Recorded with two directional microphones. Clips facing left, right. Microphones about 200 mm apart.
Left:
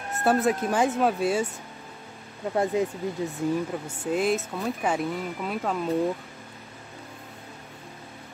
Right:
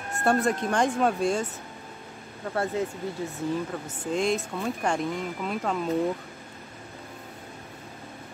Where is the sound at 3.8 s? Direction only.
5° left (ahead or behind).